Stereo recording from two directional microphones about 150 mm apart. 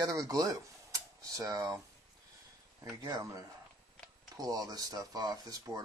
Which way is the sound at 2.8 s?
25° right (ahead or behind).